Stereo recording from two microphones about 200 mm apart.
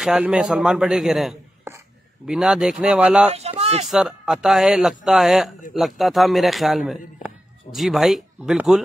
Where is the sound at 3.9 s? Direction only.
Centre (ahead or behind).